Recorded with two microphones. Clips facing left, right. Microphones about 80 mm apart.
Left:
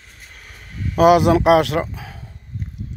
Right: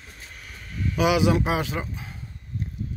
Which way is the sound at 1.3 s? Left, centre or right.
Left.